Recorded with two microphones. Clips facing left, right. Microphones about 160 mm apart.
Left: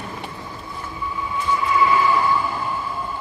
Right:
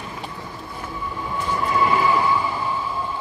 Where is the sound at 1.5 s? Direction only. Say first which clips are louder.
Left 2 dB; 45° right (ahead or behind).